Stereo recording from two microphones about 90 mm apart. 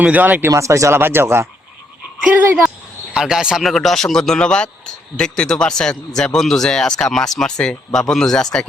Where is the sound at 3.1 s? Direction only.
5° right (ahead or behind).